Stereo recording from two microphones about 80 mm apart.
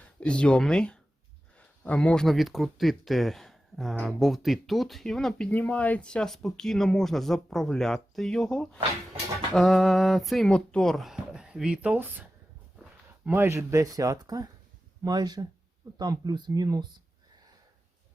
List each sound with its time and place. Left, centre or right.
0.2 s speech: centre
13.3 s speech: right